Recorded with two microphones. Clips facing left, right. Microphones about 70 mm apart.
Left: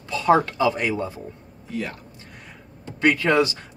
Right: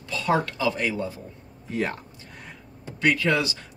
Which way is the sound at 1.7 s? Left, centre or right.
Right.